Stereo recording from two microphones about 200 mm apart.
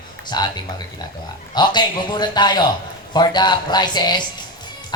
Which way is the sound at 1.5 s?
20° left (ahead or behind).